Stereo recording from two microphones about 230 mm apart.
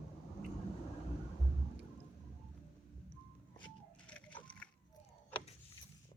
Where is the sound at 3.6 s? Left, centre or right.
Centre.